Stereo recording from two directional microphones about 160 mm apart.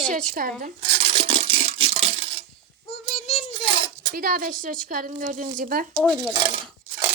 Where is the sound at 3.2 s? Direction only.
40° left (ahead or behind).